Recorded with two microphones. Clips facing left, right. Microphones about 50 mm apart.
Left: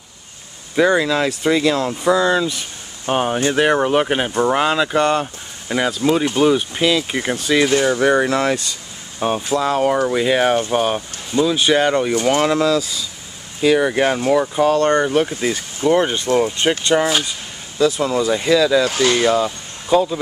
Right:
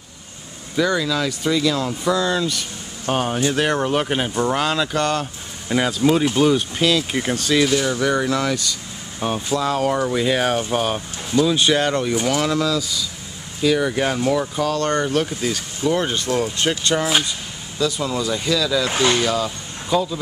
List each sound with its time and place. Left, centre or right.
0.7 s speech: left
5.8 s speech: centre
7.7 s speech: left
9.2 s speech: centre
12.3 s speech: left
14.6 s speech: left
14.9 s speech: centre
17.7 s speech: left
18.9 s speech: right
19.1 s speech: centre